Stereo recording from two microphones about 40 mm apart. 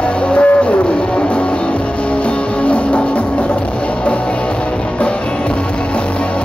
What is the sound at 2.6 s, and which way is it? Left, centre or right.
Music, left.